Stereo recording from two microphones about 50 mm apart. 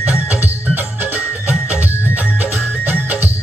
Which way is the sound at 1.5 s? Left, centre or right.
Right.